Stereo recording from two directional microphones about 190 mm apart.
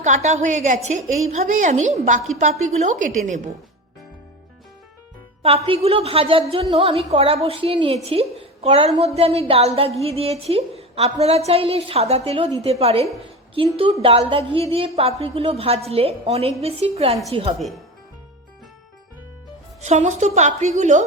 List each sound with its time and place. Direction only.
0.0 s a woman's voice: 40° right (ahead or behind)
5.4 s a woman's voice: 30° right (ahead or behind)
19.8 s a woman's voice: 35° right (ahead or behind)